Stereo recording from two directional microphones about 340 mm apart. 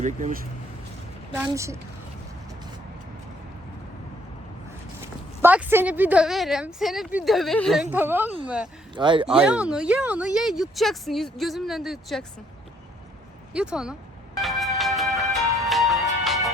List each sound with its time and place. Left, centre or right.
0.0 s speech: right
1.4 s a woman's voice: centre
5.4 s a woman's voice: centre
9.0 s a woman's voice: centre
9.4 s a woman's voice: centre
13.5 s a woman's voice: centre
14.3 s music: centre